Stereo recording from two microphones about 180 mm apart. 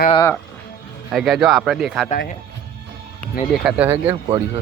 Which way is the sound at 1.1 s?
Centre (ahead or behind).